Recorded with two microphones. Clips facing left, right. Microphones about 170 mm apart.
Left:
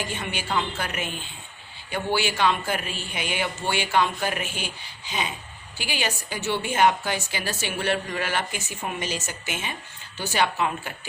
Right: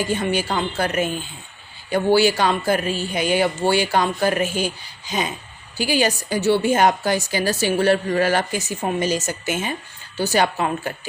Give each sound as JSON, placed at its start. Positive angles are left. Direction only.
{"t": 0.0, "sound": "a woman's voice", "side_deg": -40}